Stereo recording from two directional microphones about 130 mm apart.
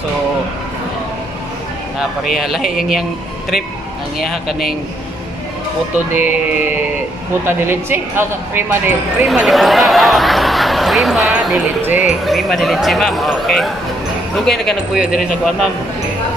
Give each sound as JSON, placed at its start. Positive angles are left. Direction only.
{"t": 2.0, "sound": "speech", "side_deg": 0}
{"t": 6.1, "sound": "speech", "side_deg": -15}
{"t": 9.3, "sound": "speech", "side_deg": 0}